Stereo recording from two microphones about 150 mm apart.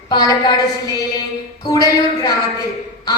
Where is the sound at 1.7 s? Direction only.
25° left (ahead or behind).